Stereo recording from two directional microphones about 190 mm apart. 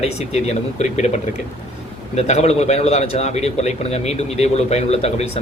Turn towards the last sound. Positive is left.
turn(degrees=35)  # may be behind; listen again after turning